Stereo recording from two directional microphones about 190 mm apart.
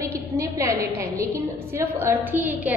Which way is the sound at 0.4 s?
15° right (ahead or behind).